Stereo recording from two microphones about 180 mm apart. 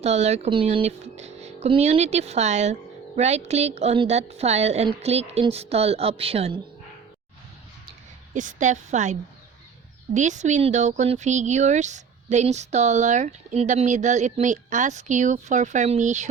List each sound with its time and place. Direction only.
0.0 s speech: 35° right (ahead or behind)
8.3 s a woman's voice: 45° right (ahead or behind)
10.2 s speech: 40° right (ahead or behind)